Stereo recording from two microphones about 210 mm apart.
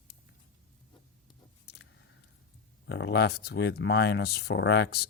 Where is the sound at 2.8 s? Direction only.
55° left (ahead or behind).